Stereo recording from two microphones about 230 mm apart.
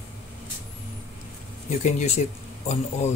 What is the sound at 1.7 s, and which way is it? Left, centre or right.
Speech, left.